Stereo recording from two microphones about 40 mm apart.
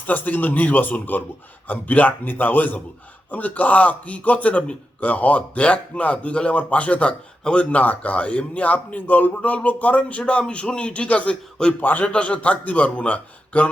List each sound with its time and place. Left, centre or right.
0.1 s a man's voice: left
7.8 s a man's voice: left
11.8 s speech: left
12.0 s a man's voice: left